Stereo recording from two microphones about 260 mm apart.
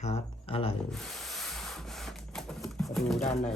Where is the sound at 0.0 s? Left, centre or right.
Left.